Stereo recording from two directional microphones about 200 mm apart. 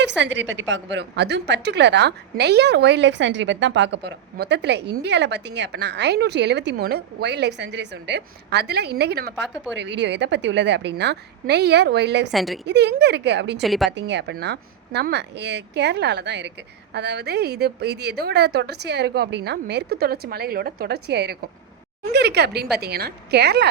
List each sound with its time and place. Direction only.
0.2 s a woman's voice: 70° right (ahead or behind)
12.3 s a woman's voice: centre (ahead or behind)
12.6 s a woman's voice: 60° right (ahead or behind)
13.6 s a woman's voice: centre (ahead or behind)
13.9 s a woman's voice: 60° right (ahead or behind)